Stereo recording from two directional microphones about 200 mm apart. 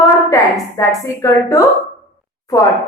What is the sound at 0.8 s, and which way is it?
A woman's voice, 15° left (ahead or behind).